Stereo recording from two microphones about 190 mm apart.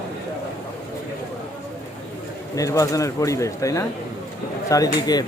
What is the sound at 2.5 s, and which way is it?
Speech, 15° left (ahead or behind).